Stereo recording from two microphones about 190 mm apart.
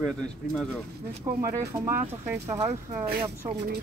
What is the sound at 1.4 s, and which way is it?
Speech, 15° right (ahead or behind).